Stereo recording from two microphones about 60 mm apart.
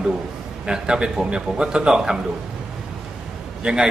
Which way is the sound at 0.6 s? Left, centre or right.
Centre.